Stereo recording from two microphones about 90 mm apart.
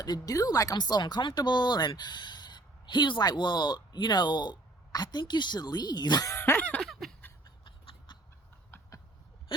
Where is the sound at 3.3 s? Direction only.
55° left (ahead or behind).